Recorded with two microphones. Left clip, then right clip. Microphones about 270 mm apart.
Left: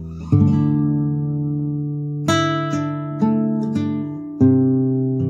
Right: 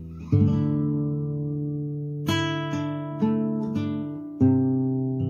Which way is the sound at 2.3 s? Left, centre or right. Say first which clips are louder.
Left 8 dB; left.